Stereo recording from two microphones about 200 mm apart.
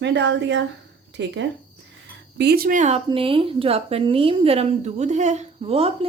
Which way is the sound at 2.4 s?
50° right (ahead or behind).